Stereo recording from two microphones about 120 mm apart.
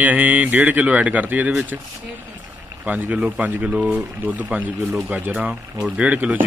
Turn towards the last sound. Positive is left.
turn(degrees=-10)  # may be behind; listen again after turning